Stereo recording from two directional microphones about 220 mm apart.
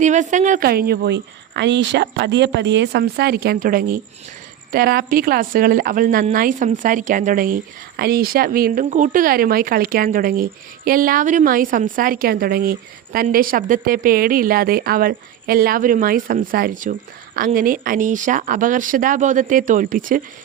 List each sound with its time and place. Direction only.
0.0 s a woman's voice: 35° right (ahead or behind)